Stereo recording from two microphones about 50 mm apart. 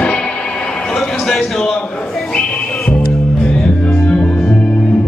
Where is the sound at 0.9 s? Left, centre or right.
Centre.